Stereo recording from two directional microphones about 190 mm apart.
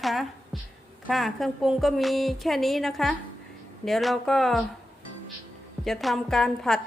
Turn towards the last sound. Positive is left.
turn(degrees=0)  # may be behind; listen again after turning